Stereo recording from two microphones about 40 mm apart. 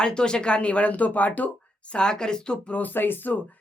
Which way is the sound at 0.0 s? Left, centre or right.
Left.